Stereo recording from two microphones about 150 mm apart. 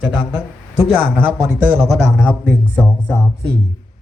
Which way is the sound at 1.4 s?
10° right (ahead or behind).